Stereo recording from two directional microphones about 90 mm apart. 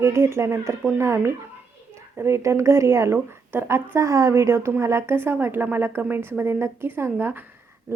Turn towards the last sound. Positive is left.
turn(degrees=-20)  # may be behind; listen again after turning